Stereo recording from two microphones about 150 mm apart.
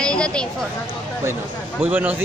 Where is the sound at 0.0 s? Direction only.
5° left (ahead or behind).